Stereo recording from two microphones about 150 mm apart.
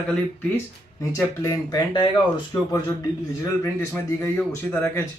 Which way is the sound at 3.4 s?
20° left (ahead or behind).